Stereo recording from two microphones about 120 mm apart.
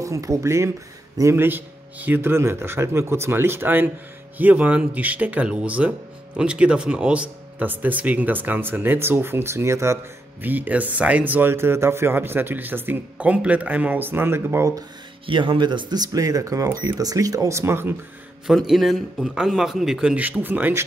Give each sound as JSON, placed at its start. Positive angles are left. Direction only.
{"t": 0.0, "sound": "speech", "side_deg": -25}
{"t": 15.2, "sound": "speech", "side_deg": -45}
{"t": 18.7, "sound": "a man's voice", "side_deg": 0}